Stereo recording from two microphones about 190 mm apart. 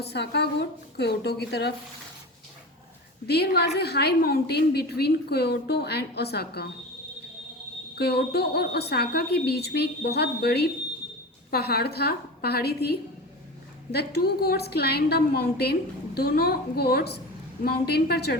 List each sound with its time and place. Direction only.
0.0 s a woman's voice: 60° left (ahead or behind)
3.2 s a woman's voice: 60° left (ahead or behind)
7.9 s a woman's voice: 60° left (ahead or behind)